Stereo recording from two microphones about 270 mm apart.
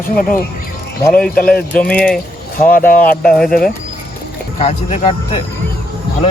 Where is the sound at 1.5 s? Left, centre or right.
Centre.